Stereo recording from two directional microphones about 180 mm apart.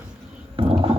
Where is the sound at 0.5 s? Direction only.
30° right (ahead or behind).